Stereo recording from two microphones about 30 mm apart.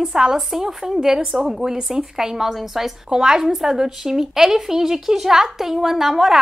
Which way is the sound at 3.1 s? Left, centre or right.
Right.